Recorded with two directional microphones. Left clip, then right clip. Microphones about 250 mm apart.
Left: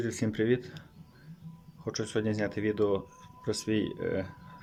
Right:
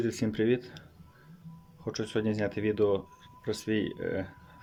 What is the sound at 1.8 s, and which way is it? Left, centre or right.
Speech, centre.